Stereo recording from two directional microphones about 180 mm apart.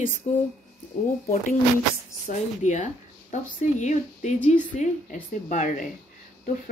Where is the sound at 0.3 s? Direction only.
35° left (ahead or behind).